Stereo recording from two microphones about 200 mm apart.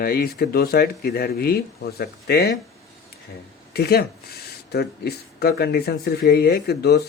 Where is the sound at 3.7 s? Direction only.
50° left (ahead or behind).